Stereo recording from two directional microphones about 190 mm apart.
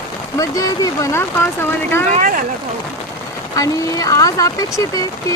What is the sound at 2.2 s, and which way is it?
Speech, 45° right (ahead or behind).